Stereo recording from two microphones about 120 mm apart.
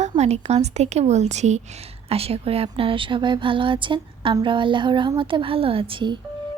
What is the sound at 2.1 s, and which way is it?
Speech, 55° right (ahead or behind).